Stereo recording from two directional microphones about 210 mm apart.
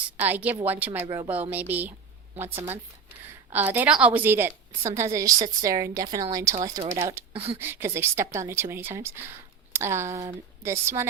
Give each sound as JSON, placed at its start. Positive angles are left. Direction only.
{"t": 0.2, "sound": "speech", "side_deg": -10}
{"t": 1.0, "sound": "speech", "side_deg": -20}
{"t": 1.3, "sound": "speech", "side_deg": -10}